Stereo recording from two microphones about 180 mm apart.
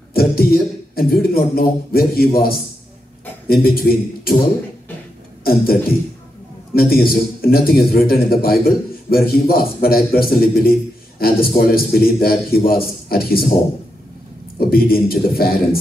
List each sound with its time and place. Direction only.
0.1 s a man's voice: 55° left (ahead or behind)
5.4 s a man's voice: 55° left (ahead or behind)
14.6 s a man's voice: 55° left (ahead or behind)